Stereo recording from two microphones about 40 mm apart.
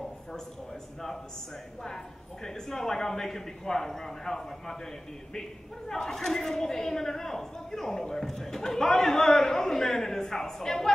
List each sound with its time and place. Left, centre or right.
2.4 s a woman's voice: centre
5.9 s a woman's voice: centre